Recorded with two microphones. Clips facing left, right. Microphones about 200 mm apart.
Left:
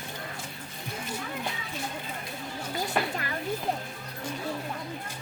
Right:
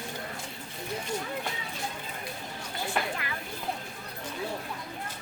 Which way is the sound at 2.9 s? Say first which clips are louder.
Left 1 dB; 40° left (ahead or behind).